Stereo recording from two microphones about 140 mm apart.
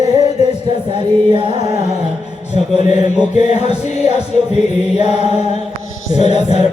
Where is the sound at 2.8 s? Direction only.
55° left (ahead or behind).